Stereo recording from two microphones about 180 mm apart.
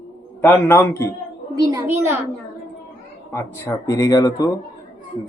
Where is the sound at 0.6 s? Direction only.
10° left (ahead or behind).